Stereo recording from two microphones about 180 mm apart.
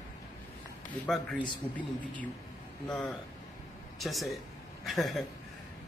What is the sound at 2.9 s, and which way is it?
A man's voice, 5° left (ahead or behind).